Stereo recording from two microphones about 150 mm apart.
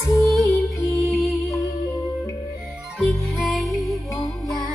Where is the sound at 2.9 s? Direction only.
Centre (ahead or behind).